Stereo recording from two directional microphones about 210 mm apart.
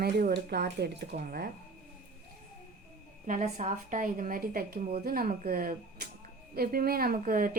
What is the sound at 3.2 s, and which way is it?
A woman's voice, 35° right (ahead or behind).